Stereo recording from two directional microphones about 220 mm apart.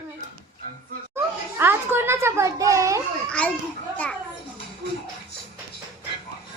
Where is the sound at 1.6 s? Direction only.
10° right (ahead or behind).